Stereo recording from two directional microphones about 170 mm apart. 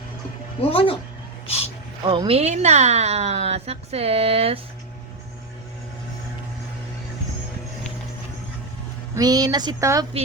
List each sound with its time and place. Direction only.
0.6 s speech: 35° left (ahead or behind)
2.0 s a woman's voice: 30° right (ahead or behind)
9.1 s speech: 20° right (ahead or behind)